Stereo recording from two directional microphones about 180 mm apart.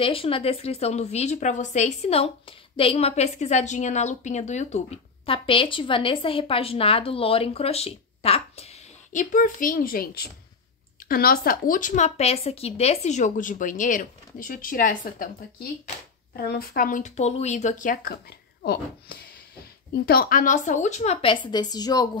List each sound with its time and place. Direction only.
0.0 s a woman's voice: 30° left (ahead or behind); by 15.2 s 50° left (ahead or behind)
16.3 s a woman's voice: 55° left (ahead or behind)
18.6 s a child's voice: 60° left (ahead or behind); by 22.1 s 20° left (ahead or behind)